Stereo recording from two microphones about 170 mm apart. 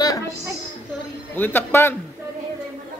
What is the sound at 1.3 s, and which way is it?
Speech, 10° left (ahead or behind).